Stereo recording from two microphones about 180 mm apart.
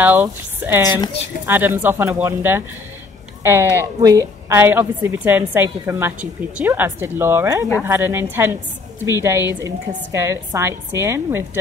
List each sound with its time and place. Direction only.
0.0 s a woman's voice: 10° right (ahead or behind)